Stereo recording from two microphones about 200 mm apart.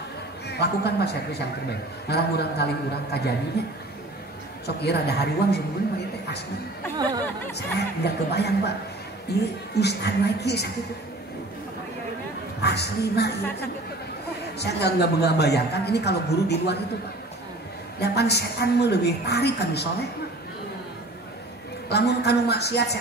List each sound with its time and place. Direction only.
0.5 s a man's voice: 55° left (ahead or behind)
7.0 s speech: 20° right (ahead or behind)
7.5 s a man's voice: 55° left (ahead or behind)
12.6 s a man's voice: 55° left (ahead or behind)
14.6 s a man's voice: 55° left (ahead or behind)
17.9 s a man's voice: 55° left (ahead or behind)
21.8 s a man's voice: 55° left (ahead or behind)